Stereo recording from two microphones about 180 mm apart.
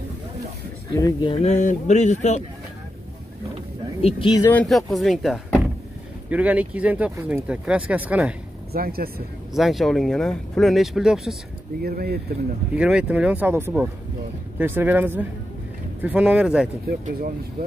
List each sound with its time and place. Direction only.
0.9 s speech: 20° left (ahead or behind)
1.3 s speech: 40° left (ahead or behind)
4.0 s speech: 25° left (ahead or behind)
4.5 s speech: 5° left (ahead or behind)
8.7 s speech: 55° right (ahead or behind)
9.5 s speech: centre (ahead or behind)
11.8 s speech: 55° right (ahead or behind)
12.7 s speech: 5° right (ahead or behind)